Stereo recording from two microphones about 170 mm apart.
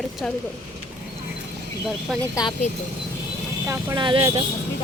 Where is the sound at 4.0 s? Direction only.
30° right (ahead or behind).